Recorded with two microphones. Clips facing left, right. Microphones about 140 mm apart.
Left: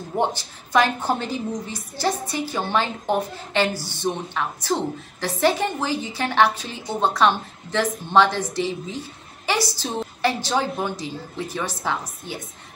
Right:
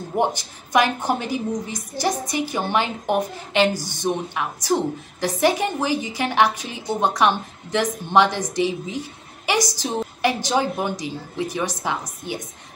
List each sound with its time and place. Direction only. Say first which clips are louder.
0.1 s a woman's voice: right 1 dB; 15° right (ahead or behind)